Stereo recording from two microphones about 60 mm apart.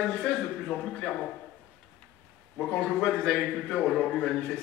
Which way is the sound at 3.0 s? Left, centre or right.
Centre.